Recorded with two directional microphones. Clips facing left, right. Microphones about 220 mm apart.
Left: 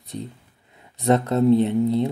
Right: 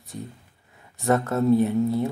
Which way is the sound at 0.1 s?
20° left (ahead or behind).